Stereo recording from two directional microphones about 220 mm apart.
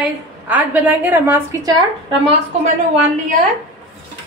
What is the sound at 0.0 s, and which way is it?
A woman's voice, 5° right (ahead or behind).